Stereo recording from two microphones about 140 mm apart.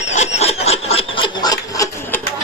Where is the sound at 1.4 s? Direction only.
25° left (ahead or behind).